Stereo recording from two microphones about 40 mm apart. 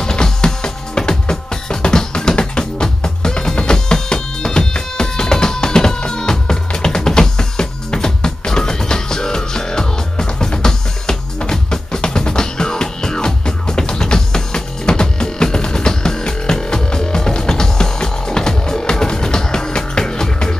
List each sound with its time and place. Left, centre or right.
0.0 s music: centre